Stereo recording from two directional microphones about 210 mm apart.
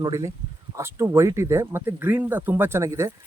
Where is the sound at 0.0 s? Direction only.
15° right (ahead or behind).